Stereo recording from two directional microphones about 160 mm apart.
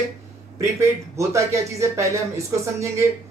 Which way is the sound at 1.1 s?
20° right (ahead or behind).